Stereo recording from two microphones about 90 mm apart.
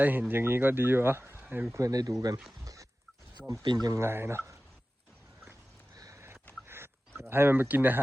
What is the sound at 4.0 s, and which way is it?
Speech, 30° right (ahead or behind).